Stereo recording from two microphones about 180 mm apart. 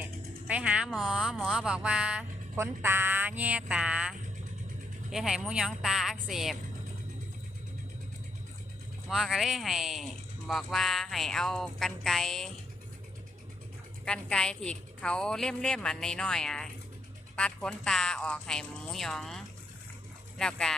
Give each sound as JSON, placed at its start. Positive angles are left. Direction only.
{"t": 0.0, "sound": "music", "side_deg": -10}
{"t": 0.9, "sound": "speech", "side_deg": 0}
{"t": 5.1, "sound": "speech", "side_deg": 0}
{"t": 9.0, "sound": "speech", "side_deg": 0}
{"t": 14.0, "sound": "speech", "side_deg": 5}
{"t": 20.4, "sound": "speech", "side_deg": 5}